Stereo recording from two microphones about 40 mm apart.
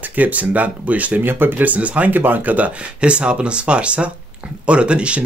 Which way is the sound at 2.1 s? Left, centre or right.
Right.